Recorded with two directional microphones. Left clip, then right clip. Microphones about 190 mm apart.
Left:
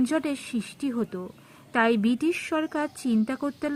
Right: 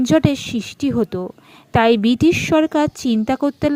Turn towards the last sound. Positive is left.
turn(degrees=-30)  # may be behind; listen again after turning